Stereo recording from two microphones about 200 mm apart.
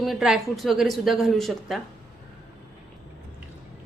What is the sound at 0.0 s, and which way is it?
A woman's voice, centre (ahead or behind).